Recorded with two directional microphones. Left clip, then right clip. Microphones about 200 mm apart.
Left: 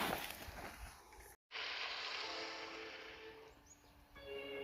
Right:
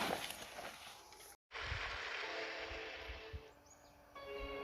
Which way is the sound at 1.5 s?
50° right (ahead or behind).